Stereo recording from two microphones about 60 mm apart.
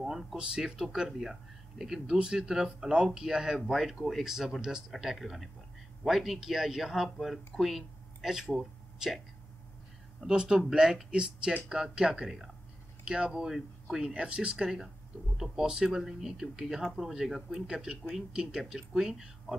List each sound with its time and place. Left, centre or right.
0.0 s a sound: centre
0.4 s speech: centre
3.5 s speech: centre
10.3 s speech: centre